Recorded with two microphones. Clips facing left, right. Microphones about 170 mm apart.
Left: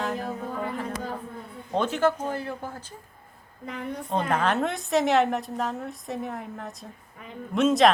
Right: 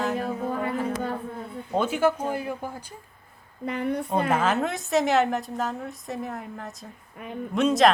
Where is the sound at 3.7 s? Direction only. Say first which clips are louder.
Right 6 dB; 65° right (ahead or behind).